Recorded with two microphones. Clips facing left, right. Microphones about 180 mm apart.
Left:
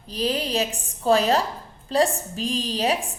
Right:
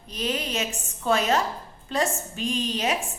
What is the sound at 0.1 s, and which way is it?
A woman's voice, 35° left (ahead or behind).